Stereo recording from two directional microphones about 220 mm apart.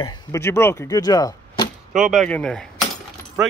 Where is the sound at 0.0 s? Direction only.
15° left (ahead or behind).